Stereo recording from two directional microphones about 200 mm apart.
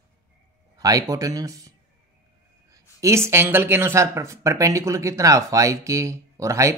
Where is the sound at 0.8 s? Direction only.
15° right (ahead or behind).